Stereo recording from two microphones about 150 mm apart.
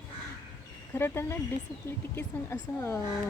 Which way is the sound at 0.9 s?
15° left (ahead or behind).